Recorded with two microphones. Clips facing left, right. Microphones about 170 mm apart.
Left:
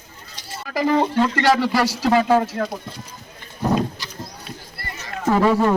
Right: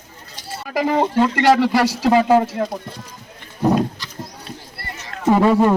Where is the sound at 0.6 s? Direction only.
20° right (ahead or behind).